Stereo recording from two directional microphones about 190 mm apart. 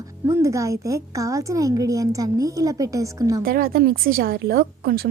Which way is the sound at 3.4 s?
50° right (ahead or behind).